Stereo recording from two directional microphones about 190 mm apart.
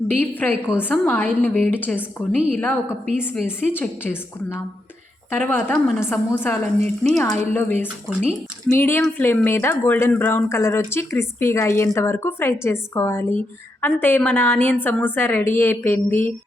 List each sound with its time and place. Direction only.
0.1 s speech: 10° left (ahead or behind)
8.2 s speech: 35° right (ahead or behind)
8.7 s speech: 10° left (ahead or behind)